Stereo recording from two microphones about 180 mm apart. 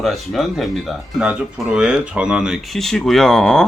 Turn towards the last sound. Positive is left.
turn(degrees=5)  # may be behind; listen again after turning